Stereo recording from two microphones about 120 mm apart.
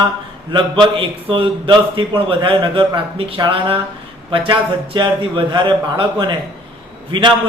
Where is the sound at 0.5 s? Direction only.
45° right (ahead or behind).